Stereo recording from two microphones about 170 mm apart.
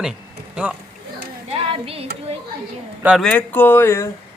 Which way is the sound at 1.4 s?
35° right (ahead or behind).